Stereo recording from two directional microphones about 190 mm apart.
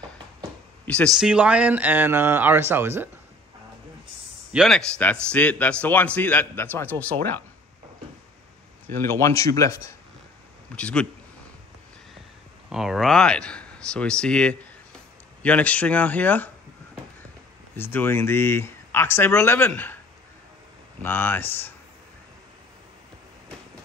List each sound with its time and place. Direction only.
0.8 s speech: 5° left (ahead or behind); by 3.1 s 10° right (ahead or behind)
4.5 s a man's voice: centre (ahead or behind)
8.8 s a man's voice: 10° left (ahead or behind)
10.8 s speech: 5° left (ahead or behind)
12.6 s a man's voice: centre (ahead or behind)
17.7 s a man's voice: 10° left (ahead or behind)
21.0 s a man's voice: 10° left (ahead or behind)